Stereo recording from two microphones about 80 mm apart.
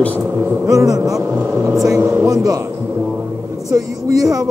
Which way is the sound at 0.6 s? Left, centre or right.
Right.